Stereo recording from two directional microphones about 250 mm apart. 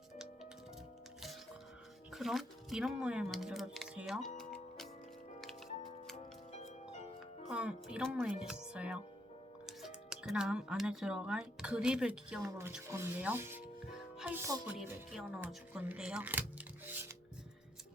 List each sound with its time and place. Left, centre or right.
2.1 s speech: centre
4.4 s music: centre
6.1 s music: left
7.4 s speech: centre